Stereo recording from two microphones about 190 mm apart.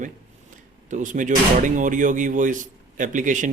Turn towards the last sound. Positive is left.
turn(degrees=-40)  # may be behind; listen again after turning